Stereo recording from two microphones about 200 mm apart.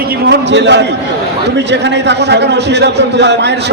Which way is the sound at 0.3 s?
60° right (ahead or behind).